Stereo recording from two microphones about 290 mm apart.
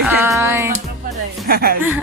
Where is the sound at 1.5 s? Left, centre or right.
Right.